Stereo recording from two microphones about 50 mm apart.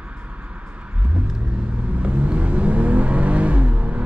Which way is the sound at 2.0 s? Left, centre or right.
Right.